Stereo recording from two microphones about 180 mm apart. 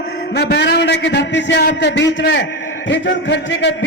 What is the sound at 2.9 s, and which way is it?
Speech, 85° left.